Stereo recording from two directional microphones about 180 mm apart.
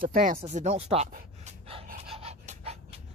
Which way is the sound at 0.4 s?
40° right (ahead or behind).